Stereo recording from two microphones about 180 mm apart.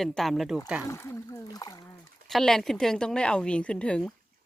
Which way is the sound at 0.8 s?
15° left (ahead or behind).